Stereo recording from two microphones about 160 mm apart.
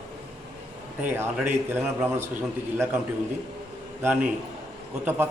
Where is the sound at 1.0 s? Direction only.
15° right (ahead or behind).